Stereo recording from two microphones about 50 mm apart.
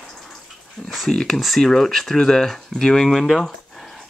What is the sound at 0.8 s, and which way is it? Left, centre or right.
Speech, centre.